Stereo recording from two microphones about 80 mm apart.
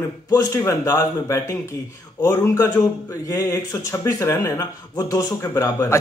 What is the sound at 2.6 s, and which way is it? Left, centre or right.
A man's voice, left.